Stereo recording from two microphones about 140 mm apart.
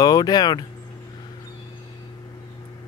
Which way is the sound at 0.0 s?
25° left (ahead or behind).